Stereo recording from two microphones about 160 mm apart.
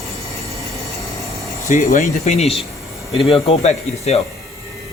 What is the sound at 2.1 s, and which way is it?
A man's voice, 40° left (ahead or behind).